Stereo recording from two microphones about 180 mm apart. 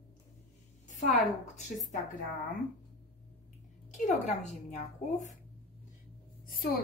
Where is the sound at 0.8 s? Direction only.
40° left (ahead or behind).